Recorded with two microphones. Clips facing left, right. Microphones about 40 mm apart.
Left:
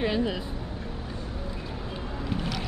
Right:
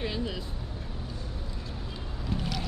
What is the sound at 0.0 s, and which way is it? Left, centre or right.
Vehicle, centre.